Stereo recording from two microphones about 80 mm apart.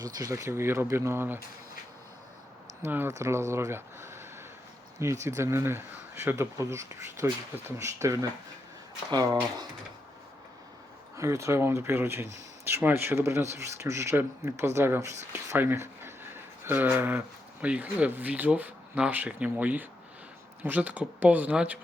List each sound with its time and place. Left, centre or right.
0.0 s speech: right
2.8 s speech: right
3.1 s speech: right
9.0 s speech: right
11.2 s speech: right
15.5 s a sound: right
17.7 s speech: centre